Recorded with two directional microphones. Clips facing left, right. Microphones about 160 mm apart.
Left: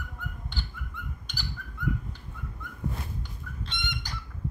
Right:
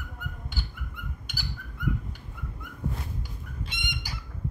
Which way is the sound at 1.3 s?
5° right (ahead or behind).